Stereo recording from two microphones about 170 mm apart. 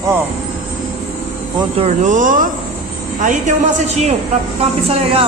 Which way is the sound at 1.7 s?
40° right (ahead or behind).